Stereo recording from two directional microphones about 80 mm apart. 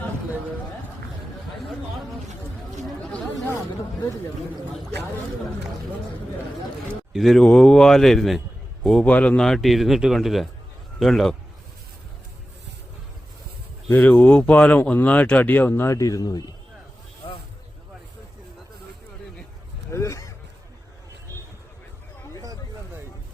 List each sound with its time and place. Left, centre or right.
3.0 s chatter: centre
7.1 s a man's voice: centre
9.0 s speech: centre
9.4 s speech: centre
14.1 s speech: centre
15.7 s speech: left
19.9 s honk: left